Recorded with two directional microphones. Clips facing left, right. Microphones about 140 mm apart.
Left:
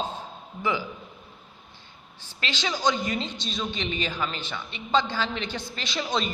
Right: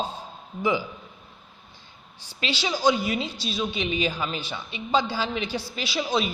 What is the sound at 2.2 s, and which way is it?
A woman's voice, 10° right (ahead or behind).